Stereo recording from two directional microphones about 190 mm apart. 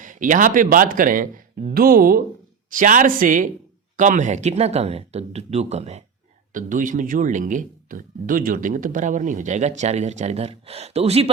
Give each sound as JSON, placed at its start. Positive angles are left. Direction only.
{"t": 0.0, "sound": "speech", "side_deg": -40}